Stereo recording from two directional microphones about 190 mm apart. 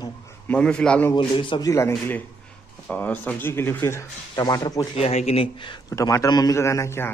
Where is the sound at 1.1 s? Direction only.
25° left (ahead or behind).